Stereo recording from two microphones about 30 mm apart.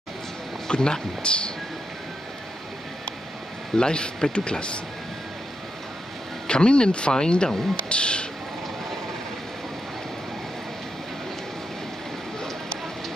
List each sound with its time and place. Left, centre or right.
0.7 s speech: left
3.7 s speech: left
6.4 s speech: left